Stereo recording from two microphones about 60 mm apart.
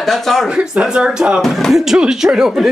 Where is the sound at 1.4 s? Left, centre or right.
Centre.